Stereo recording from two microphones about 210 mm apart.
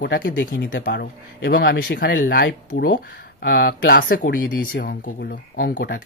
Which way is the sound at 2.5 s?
55° left (ahead or behind).